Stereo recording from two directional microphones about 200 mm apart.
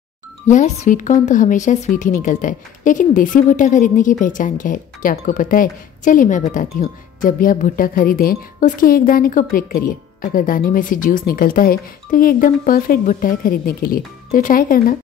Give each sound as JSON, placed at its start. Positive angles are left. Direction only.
{"t": 0.5, "sound": "speech", "side_deg": 40}